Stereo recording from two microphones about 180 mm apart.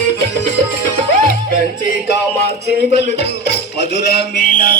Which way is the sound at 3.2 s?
65° left (ahead or behind).